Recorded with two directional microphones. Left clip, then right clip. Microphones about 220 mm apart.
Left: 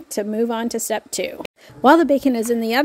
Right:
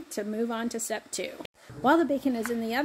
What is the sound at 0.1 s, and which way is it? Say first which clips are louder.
A woman's voice: left 10 dB; 40° left (ahead or behind).